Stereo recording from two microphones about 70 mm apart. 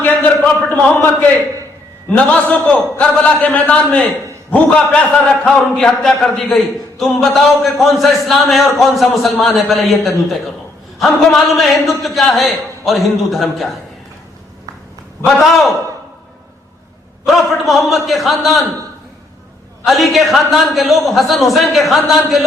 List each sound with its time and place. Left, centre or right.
0.0 s a sound: left
2.0 s a man's voice: centre
15.4 s a man's voice: centre
17.2 s a man's voice: centre
19.8 s a man's voice: centre